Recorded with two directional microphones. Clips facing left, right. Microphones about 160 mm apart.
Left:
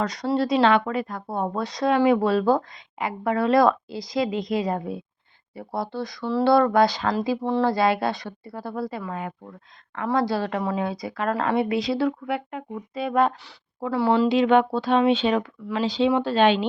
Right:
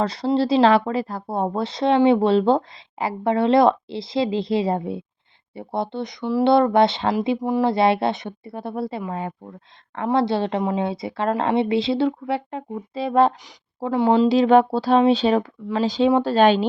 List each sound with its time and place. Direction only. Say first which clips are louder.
0.0 s speech: right 3 dB; 30° right (ahead or behind)
7.4 s speech: right 1 dB; 15° right (ahead or behind)
7.7 s speech: right 3 dB; 25° right (ahead or behind)
14.3 s speech: right 3 dB; 35° right (ahead or behind)